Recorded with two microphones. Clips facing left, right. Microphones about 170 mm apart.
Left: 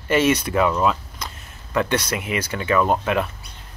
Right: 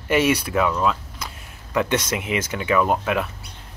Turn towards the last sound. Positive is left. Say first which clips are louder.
# left 1 dB
turn(degrees=-5)  # may be behind; listen again after turning